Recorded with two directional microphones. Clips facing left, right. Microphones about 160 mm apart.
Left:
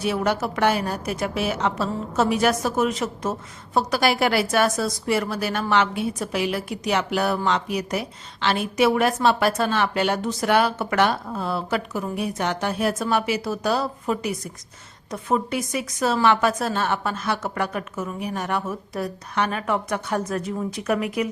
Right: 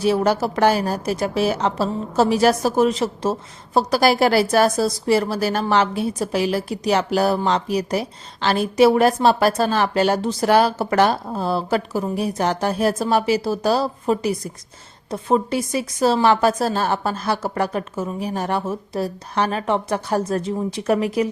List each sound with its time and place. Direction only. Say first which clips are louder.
0.0 s a woman's voice: right 5 dB; 35° right (ahead or behind)